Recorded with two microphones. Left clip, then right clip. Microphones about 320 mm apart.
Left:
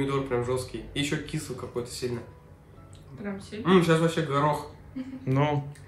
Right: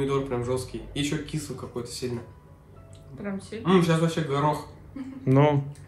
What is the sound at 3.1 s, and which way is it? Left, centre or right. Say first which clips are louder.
Speech: right 2 dB; centre.